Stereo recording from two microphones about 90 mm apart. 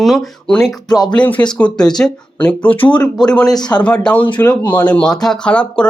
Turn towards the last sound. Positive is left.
turn(degrees=10)  # may be behind; listen again after turning